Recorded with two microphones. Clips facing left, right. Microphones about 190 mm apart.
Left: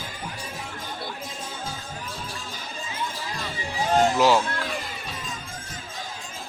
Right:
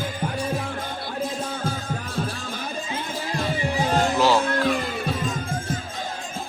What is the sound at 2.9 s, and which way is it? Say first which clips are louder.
Music: right 2 dB; 55° right (ahead or behind).